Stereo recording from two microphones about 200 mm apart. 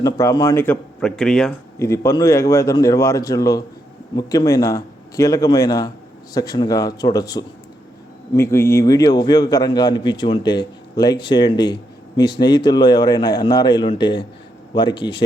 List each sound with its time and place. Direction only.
0.0 s speech: 15° left (ahead or behind)
1.8 s a man's voice: 15° left (ahead or behind)